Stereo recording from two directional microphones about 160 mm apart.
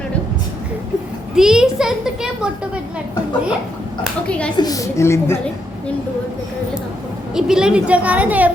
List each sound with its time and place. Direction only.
1.4 s a child's voice: 5° right (ahead or behind)
4.0 s a woman's voice: 5° left (ahead or behind)
4.5 s a woman's voice: 25° left (ahead or behind)
7.3 s a woman's voice: 5° right (ahead or behind)